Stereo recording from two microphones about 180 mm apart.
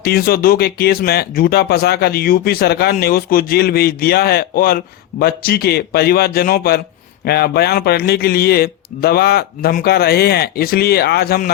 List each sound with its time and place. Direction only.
0.0 s a man's voice: 55° left (ahead or behind)